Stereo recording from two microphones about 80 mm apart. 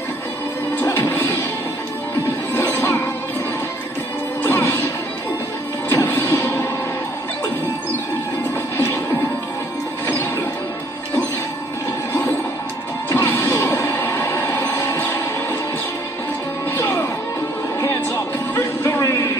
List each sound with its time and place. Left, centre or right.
0.8 s music: left
2.5 s music: left
4.4 s music: left
5.9 s music: left
8.7 s music: left
12.1 s music: left
13.1 s smash: left
13.5 s music: left
16.7 s music: left
18.5 s music: left
18.9 s a sound: left